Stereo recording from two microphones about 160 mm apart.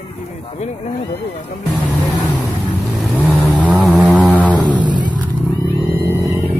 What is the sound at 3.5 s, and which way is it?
Vehicle, 10° left (ahead or behind).